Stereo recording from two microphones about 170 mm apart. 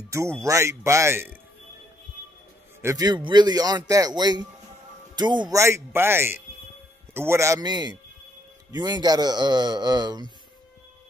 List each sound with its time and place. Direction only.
0.4 s speech: 15° right (ahead or behind)
2.8 s a man's voice: 20° right (ahead or behind)
5.6 s a man's voice: 15° right (ahead or behind)